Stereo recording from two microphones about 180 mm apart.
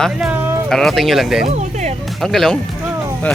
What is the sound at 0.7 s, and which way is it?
Speech, centre (ahead or behind).